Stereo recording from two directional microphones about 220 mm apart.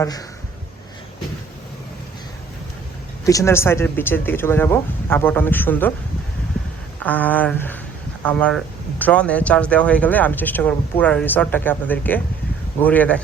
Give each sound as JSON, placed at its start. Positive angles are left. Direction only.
{"t": 0.0, "sound": "speech", "side_deg": 15}
{"t": 3.2, "sound": "speech", "side_deg": 15}
{"t": 6.5, "sound": "a sound", "side_deg": 5}
{"t": 7.0, "sound": "speech", "side_deg": 5}